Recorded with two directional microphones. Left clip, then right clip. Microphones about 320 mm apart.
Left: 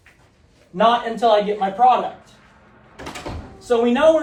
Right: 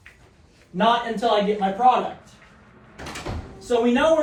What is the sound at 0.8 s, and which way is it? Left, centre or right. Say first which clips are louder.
A man's voice: left 4 dB; left.